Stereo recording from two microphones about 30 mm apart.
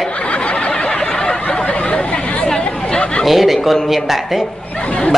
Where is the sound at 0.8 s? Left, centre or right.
Left.